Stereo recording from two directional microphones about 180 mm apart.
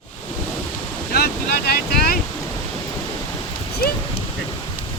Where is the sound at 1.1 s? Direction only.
60° left (ahead or behind).